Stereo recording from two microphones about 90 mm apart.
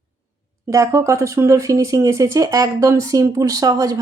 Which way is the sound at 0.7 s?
35° right (ahead or behind).